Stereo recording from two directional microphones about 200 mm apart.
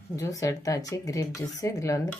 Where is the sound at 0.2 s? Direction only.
15° left (ahead or behind).